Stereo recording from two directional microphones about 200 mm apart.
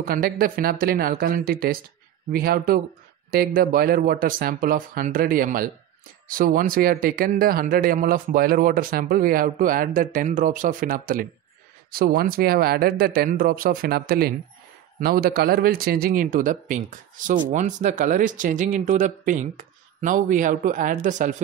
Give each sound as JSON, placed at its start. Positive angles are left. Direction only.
{"t": 0.0, "sound": "a man's voice", "side_deg": -45}